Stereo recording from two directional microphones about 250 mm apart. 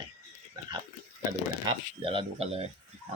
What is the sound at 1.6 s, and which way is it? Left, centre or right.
Speech, centre.